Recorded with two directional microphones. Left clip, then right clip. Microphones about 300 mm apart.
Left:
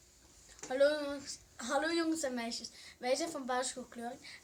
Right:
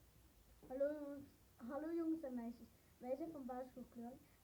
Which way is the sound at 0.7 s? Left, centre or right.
Centre.